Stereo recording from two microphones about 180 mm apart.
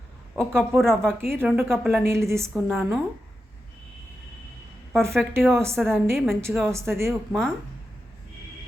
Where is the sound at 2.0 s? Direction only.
15° right (ahead or behind).